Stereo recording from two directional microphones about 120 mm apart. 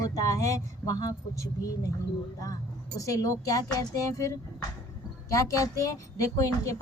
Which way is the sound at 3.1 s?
30° left (ahead or behind).